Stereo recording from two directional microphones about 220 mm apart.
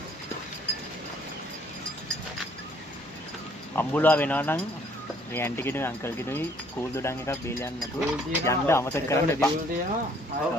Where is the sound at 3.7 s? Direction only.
10° left (ahead or behind).